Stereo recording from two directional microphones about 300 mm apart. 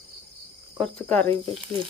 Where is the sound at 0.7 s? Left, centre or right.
Centre.